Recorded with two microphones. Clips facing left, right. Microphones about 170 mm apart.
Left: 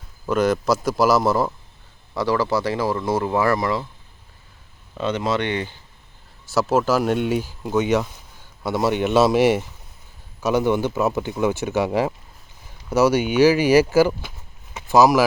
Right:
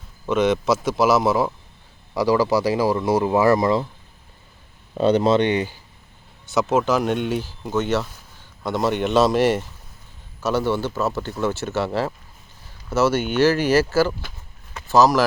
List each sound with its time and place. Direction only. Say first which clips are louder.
0.3 s a man's voice: even; centre (ahead or behind)
2.1 s speech: right 3 dB; 15° right (ahead or behind)
4.9 s speech: right 6 dB; 35° right (ahead or behind); by 5.7 s 15° right (ahead or behind)
6.5 s speech: even; 5° left (ahead or behind)